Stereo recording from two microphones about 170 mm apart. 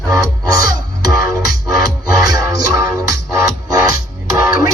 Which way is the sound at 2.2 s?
20° right (ahead or behind).